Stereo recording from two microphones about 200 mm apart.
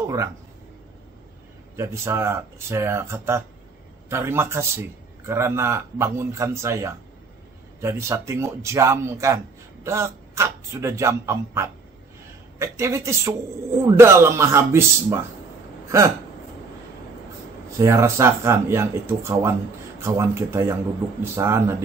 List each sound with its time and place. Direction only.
0.0 s a sound: 15° right (ahead or behind)
1.8 s speech: 15° right (ahead or behind)
17.6 s speech: 15° right (ahead or behind)